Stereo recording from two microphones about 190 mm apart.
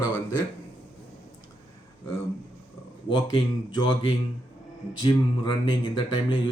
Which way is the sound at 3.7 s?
25° left (ahead or behind).